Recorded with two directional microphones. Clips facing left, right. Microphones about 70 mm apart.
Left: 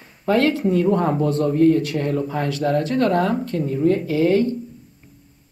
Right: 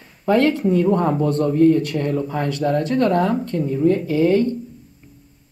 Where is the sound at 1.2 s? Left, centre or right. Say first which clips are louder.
Right 1 dB; right.